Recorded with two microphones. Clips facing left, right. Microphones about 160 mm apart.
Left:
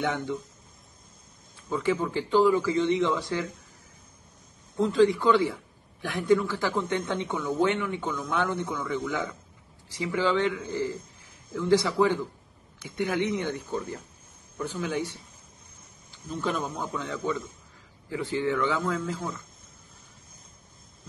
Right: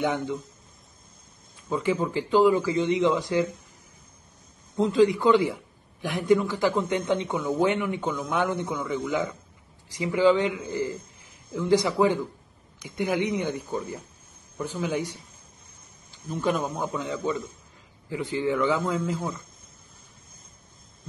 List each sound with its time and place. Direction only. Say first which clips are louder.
0.0 s speech: right 3 dB; 15° right (ahead or behind)
1.7 s speech: right 1 dB; 15° right (ahead or behind)
4.7 s a man's voice: right 1 dB; 20° right (ahead or behind)
16.1 s speech: right 4 dB; 15° right (ahead or behind)